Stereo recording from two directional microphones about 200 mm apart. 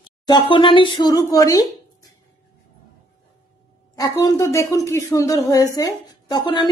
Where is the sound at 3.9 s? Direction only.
15° left (ahead or behind).